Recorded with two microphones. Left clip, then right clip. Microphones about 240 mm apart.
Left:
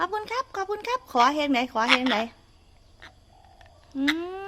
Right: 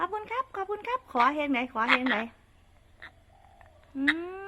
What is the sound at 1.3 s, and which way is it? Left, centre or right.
A woman's voice, centre.